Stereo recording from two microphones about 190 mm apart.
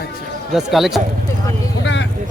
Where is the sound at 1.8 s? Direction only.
70° left (ahead or behind).